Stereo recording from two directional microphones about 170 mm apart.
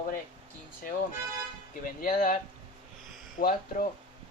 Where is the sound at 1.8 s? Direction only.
55° left (ahead or behind).